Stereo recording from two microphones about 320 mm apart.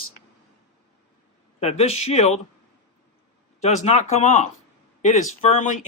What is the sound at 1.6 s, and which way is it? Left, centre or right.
Speech, centre.